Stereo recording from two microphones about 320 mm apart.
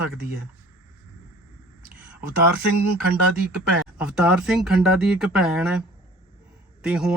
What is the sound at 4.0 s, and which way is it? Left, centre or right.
Speech, centre.